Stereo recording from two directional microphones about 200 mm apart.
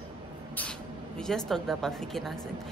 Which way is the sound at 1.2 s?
5° left (ahead or behind).